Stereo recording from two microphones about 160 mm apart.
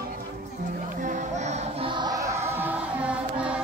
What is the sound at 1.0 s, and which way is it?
Music, 45° right (ahead or behind).